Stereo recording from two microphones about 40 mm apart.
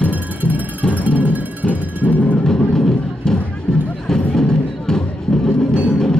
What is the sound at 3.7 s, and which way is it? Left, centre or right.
Music, centre.